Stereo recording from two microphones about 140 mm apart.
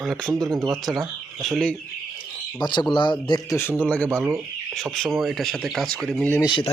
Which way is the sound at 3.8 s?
10° left (ahead or behind).